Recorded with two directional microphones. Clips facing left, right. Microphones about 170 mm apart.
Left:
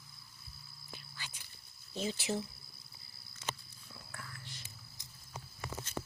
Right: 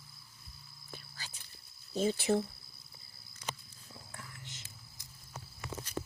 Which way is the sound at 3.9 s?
20° right (ahead or behind).